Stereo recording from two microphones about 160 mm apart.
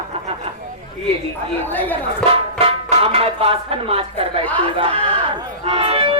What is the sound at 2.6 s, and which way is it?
Speech, 35° right (ahead or behind).